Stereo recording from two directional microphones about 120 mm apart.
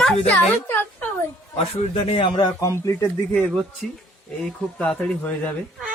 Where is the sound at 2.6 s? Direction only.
25° left (ahead or behind).